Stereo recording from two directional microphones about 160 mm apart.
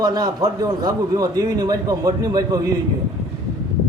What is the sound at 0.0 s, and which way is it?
A man's voice, 25° right (ahead or behind).